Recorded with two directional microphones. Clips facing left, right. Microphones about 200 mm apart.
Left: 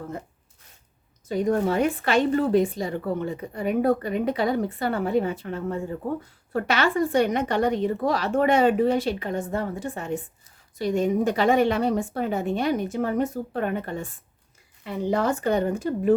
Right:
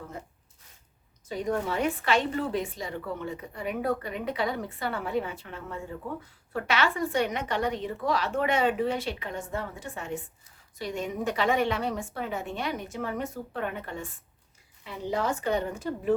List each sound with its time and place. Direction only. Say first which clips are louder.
1.3 s a woman's voice: left 7 dB; 45° left (ahead or behind)
14.8 s speech: left 6 dB; 50° left (ahead or behind)